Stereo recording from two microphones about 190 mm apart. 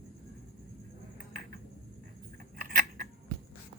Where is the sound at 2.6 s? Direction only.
50° right (ahead or behind).